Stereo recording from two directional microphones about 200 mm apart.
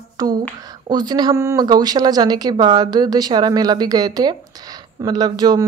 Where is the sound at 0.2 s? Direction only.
20° right (ahead or behind).